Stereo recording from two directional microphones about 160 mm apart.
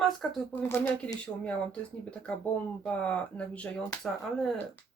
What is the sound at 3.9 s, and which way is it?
Speech, 20° left (ahead or behind).